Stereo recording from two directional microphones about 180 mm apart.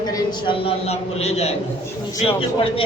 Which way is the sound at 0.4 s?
35° left (ahead or behind).